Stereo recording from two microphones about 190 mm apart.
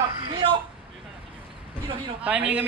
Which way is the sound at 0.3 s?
25° right (ahead or behind).